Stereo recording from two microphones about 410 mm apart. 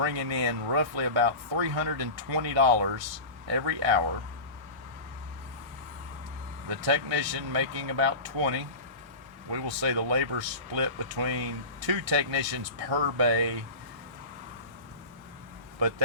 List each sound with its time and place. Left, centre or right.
0.0 s speech: right
6.7 s speech: right